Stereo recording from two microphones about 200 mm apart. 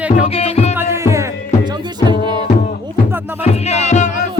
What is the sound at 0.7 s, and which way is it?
Music, 15° right (ahead or behind).